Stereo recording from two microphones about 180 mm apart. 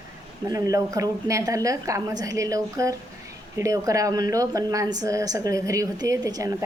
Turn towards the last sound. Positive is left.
turn(degrees=-20)  # may be behind; listen again after turning